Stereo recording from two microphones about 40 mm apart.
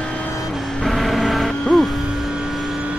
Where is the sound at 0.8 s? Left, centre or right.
Centre.